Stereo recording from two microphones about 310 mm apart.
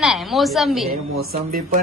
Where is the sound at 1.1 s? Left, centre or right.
Right.